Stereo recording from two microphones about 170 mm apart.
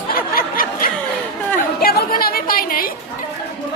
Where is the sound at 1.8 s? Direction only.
60° left (ahead or behind).